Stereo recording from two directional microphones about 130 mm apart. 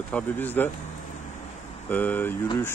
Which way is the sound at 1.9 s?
10° left (ahead or behind).